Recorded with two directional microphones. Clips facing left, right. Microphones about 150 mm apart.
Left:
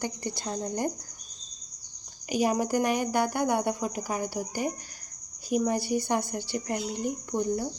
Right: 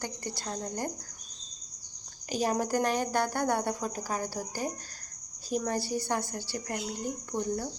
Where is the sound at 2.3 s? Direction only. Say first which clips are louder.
Left 3 dB; 10° left (ahead or behind).